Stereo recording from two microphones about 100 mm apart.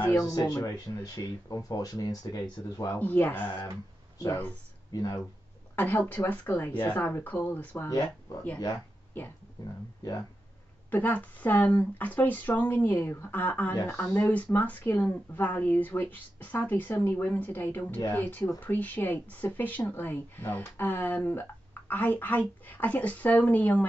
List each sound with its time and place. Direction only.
0.0 s speech: 30° left (ahead or behind)
2.9 s speech: 20° left (ahead or behind)
4.9 s speech: 40° left (ahead or behind)
5.8 s speech: 20° left (ahead or behind)
9.6 s speech: 40° left (ahead or behind)
10.9 s speech: 20° left (ahead or behind)